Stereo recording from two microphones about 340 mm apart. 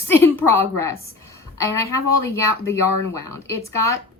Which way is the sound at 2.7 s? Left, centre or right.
Centre.